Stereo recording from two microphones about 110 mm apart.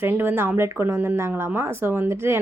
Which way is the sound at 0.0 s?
15° right (ahead or behind).